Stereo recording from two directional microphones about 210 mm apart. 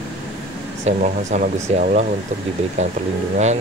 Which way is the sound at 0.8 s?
40° right (ahead or behind).